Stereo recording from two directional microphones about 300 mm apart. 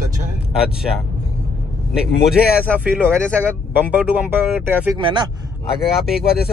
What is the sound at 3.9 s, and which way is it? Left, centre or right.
Speech, centre.